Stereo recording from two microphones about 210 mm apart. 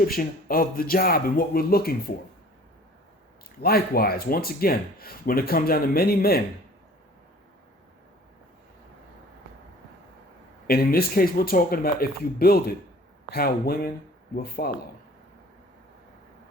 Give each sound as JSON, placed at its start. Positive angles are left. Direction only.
{"t": 0.0, "sound": "speech", "side_deg": 45}
{"t": 3.6, "sound": "speech", "side_deg": 45}
{"t": 10.7, "sound": "speech", "side_deg": 45}